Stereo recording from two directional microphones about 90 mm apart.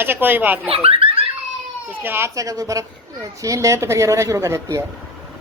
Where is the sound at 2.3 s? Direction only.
40° right (ahead or behind).